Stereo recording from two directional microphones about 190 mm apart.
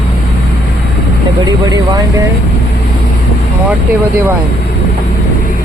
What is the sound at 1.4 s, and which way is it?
Speech, 20° right (ahead or behind).